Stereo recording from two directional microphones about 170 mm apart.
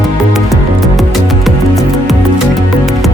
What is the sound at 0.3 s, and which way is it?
Music, centre (ahead or behind).